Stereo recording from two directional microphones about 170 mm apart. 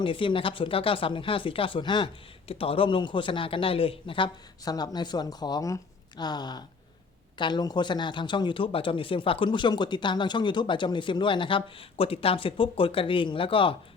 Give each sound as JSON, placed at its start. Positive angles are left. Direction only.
{"t": 0.0, "sound": "speech", "side_deg": 30}